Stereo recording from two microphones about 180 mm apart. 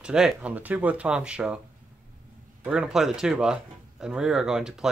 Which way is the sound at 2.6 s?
5° right (ahead or behind).